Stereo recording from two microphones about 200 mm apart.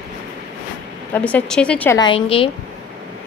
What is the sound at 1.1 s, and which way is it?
Speech, 10° left (ahead or behind).